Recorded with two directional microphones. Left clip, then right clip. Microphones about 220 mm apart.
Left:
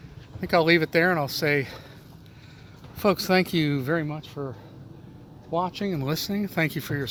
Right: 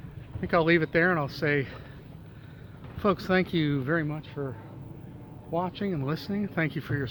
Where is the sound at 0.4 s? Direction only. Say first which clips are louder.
Left 3 dB; 30° left (ahead or behind).